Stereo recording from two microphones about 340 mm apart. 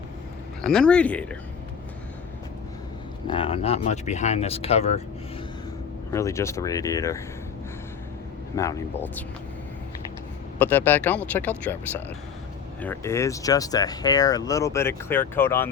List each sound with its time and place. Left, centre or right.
0.6 s speech: centre
3.2 s speech: centre
6.1 s speech: centre
8.5 s speech: centre
10.6 s speech: centre